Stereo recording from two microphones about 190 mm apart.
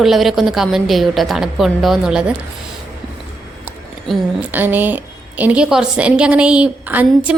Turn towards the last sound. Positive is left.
turn(degrees=-10)  # may be behind; listen again after turning